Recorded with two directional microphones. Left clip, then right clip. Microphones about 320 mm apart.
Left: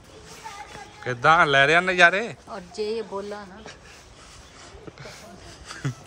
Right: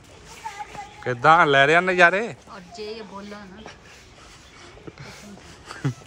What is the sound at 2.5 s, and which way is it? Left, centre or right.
Speech, left.